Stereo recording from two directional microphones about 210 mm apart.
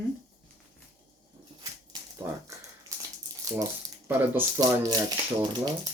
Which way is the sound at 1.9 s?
20° right (ahead or behind).